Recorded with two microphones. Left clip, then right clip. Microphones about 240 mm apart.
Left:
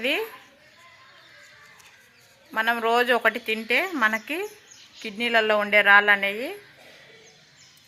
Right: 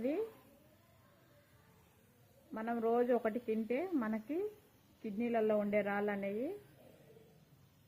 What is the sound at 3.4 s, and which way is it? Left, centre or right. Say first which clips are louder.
Speech: left 14 dB; left.